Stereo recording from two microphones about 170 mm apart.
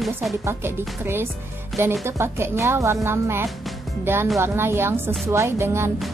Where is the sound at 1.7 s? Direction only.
Centre (ahead or behind).